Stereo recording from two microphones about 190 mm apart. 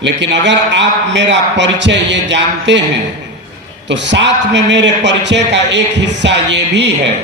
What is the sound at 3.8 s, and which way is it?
A man's voice, 70° right (ahead or behind).